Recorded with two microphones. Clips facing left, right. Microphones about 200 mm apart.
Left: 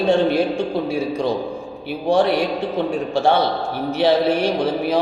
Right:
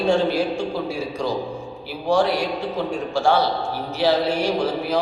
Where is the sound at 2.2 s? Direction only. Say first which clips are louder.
Left 3 dB; 60° left (ahead or behind).